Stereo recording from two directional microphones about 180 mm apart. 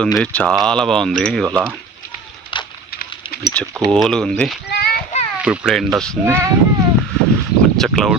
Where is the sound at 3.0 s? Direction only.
60° left (ahead or behind).